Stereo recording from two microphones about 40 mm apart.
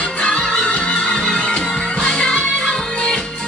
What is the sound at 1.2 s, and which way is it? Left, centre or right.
Music, centre.